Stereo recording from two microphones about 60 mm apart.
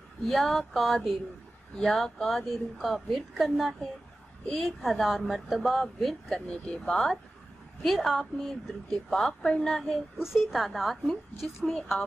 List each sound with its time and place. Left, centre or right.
0.3 s a woman's voice: centre
2.2 s a woman's voice: centre
6.2 s a woman's voice: centre
10.1 s a woman's voice: centre